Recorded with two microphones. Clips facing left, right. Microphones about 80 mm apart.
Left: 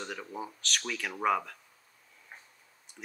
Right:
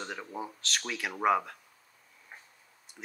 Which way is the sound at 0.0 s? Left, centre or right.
Centre.